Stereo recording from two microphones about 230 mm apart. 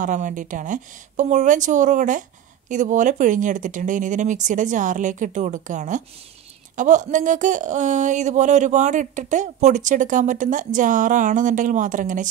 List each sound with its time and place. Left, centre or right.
0.0 s speech: right